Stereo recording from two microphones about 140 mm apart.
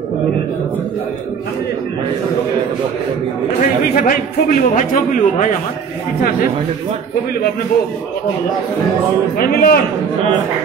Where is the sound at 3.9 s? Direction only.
70° left (ahead or behind).